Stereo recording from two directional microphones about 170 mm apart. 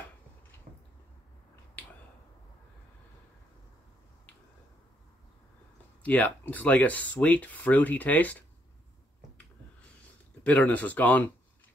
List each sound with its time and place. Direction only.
0.7 s a sound: 50° right (ahead or behind)
6.0 s speech: 10° left (ahead or behind)
10.4 s speech: 10° left (ahead or behind)